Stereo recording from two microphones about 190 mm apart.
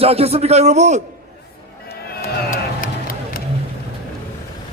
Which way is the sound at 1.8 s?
55° left (ahead or behind).